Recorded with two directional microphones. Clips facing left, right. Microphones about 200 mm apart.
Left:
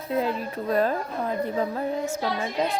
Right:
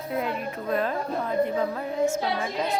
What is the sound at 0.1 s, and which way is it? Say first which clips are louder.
Speech: left 3 dB; 30° left (ahead or behind).